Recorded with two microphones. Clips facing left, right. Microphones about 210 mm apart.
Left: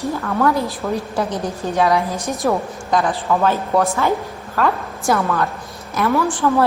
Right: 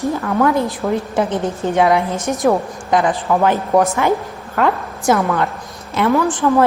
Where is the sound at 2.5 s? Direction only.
15° right (ahead or behind).